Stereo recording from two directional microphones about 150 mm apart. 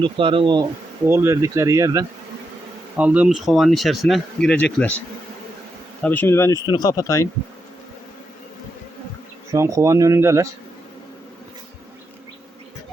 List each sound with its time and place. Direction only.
0.0 s speech: 35° right (ahead or behind)
1.0 s speech: 15° right (ahead or behind)
3.0 s speech: 10° right (ahead or behind); by 4.9 s 10° left (ahead or behind)
6.0 s speech: 10° left (ahead or behind)
9.5 s speech: 20° right (ahead or behind)